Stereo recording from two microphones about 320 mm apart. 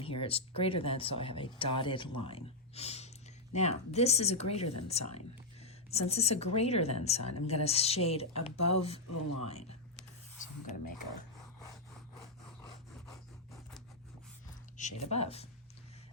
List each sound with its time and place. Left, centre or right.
0.0 s speech: centre
13.1 s scratch: centre
14.8 s speech: left